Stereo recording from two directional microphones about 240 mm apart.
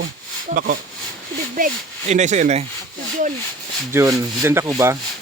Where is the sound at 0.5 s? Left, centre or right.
Right.